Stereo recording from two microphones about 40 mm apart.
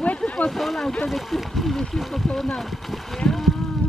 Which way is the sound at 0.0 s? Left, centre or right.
Left.